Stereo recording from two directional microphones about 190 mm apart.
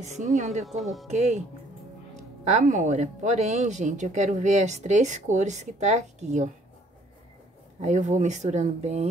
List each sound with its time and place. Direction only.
0.0 s speech: 35° right (ahead or behind)
0.7 s speech: centre (ahead or behind)
2.4 s speech: 40° right (ahead or behind)
7.8 s speech: 40° right (ahead or behind)